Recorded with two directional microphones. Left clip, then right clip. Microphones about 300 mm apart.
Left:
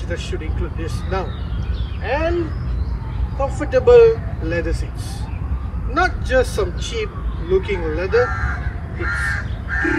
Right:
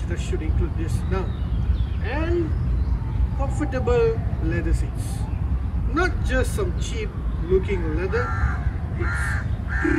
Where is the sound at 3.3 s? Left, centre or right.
Centre.